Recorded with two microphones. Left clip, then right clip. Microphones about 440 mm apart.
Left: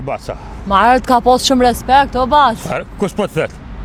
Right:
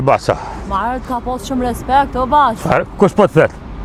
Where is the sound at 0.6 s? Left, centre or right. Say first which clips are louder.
Left 9 dB; left.